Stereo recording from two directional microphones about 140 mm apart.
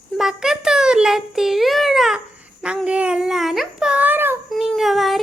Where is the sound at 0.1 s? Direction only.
Centre (ahead or behind).